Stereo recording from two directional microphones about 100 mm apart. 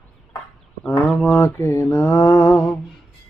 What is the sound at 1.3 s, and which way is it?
Mantra, 25° left (ahead or behind).